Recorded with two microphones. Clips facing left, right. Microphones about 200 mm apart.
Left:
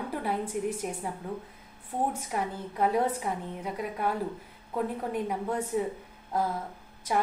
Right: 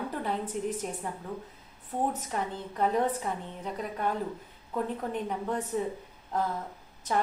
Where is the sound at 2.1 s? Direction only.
10° left (ahead or behind).